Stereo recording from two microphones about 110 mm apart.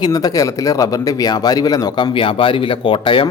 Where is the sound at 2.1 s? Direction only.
55° left (ahead or behind).